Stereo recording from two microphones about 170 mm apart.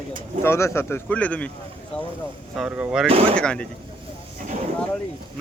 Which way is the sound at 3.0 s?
35° right (ahead or behind).